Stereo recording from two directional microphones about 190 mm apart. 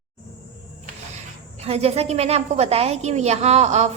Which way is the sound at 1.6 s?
30° right (ahead or behind).